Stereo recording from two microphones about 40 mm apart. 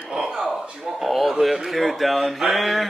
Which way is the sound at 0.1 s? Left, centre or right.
Centre.